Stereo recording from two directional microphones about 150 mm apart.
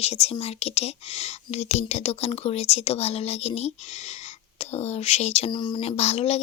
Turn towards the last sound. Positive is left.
turn(degrees=45)  # may be behind; listen again after turning